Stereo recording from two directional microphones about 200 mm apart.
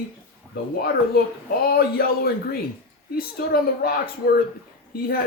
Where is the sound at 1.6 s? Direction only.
50° left (ahead or behind).